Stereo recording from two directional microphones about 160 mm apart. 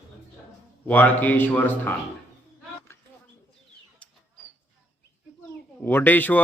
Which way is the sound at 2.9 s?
15° left (ahead or behind).